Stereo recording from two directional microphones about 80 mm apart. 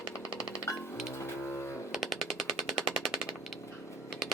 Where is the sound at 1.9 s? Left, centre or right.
Centre.